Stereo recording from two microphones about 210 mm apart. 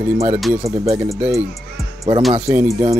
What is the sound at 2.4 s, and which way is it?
Speech, 10° right (ahead or behind).